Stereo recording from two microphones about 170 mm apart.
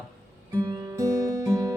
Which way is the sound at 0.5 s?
20° right (ahead or behind).